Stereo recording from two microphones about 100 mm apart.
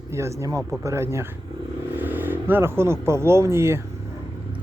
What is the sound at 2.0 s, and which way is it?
Vehicle, 20° right (ahead or behind).